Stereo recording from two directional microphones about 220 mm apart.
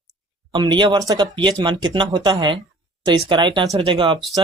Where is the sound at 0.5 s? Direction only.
20° right (ahead or behind).